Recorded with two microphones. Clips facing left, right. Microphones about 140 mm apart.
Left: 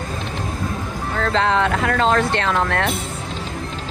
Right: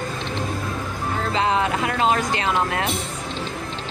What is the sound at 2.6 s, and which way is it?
Speech, 65° left (ahead or behind).